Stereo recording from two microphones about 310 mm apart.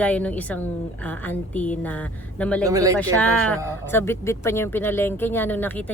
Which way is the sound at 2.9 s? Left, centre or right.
Centre.